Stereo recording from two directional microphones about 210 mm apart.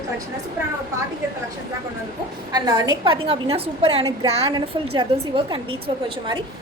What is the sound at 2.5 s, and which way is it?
A woman's voice, 20° right (ahead or behind).